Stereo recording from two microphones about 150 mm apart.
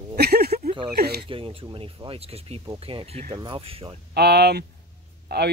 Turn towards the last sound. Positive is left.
turn(degrees=-90)